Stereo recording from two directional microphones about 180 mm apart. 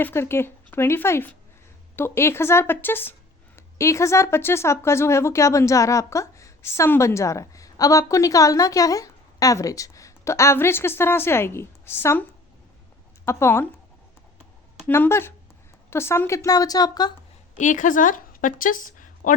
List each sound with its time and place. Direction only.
0.0 s a woman's voice: 15° left (ahead or behind)
13.2 s a woman's voice: 15° left (ahead or behind)
14.8 s a woman's voice: 10° left (ahead or behind)
17.6 s a woman's voice: 45° left (ahead or behind)